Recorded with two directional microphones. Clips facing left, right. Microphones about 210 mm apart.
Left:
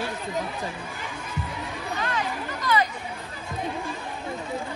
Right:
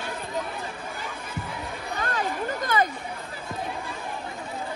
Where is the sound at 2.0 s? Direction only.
50° right (ahead or behind).